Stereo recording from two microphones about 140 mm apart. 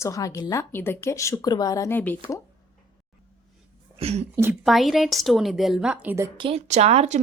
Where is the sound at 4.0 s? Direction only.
45° right (ahead or behind).